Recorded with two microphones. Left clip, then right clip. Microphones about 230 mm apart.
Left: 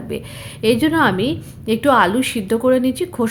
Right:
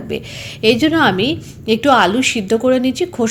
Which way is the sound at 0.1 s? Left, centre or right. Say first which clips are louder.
Right 5 dB; centre.